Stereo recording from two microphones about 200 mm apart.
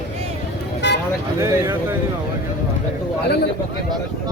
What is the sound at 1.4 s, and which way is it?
Speech, 15° right (ahead or behind).